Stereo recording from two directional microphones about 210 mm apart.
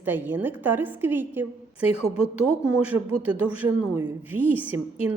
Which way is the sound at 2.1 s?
90° right.